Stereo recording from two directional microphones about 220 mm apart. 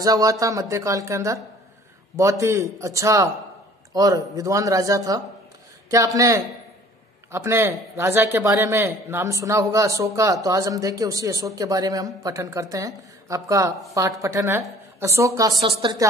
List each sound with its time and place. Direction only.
0.0 s speech: 15° right (ahead or behind)